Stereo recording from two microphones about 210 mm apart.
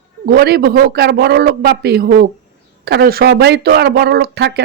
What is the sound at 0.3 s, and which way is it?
Speech, 50° right (ahead or behind).